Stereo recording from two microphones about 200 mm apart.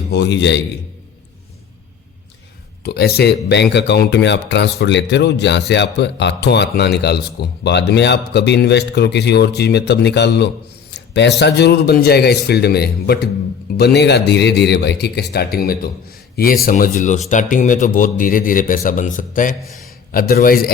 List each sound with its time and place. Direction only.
0.1 s speech: 60° left (ahead or behind)
2.8 s a man's voice: 50° left (ahead or behind)